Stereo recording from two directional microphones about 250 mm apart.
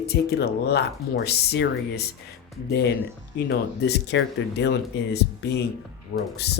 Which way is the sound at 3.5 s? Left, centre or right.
Left.